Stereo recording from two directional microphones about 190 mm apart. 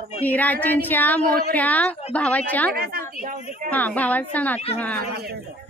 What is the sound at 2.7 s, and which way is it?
Speech, 55° right (ahead or behind).